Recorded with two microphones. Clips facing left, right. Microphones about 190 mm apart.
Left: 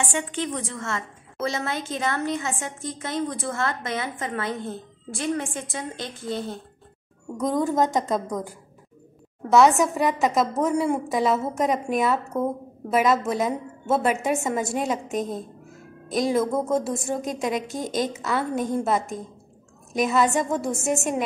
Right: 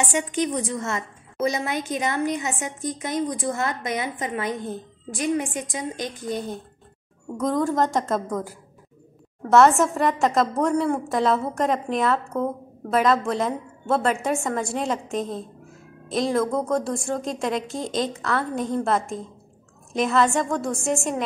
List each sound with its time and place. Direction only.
0.0 s a woman's voice: 15° right (ahead or behind)
7.3 s a woman's voice: centre (ahead or behind)